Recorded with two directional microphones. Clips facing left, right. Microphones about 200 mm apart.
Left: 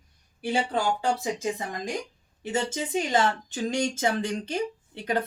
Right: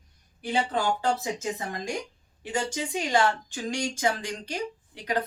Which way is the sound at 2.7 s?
20° left (ahead or behind).